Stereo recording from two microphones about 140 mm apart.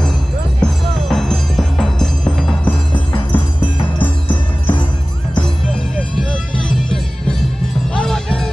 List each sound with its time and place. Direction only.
0.6 s music: 5° left (ahead or behind)
4.3 s music: 35° left (ahead or behind)
7.9 s music: 5° left (ahead or behind)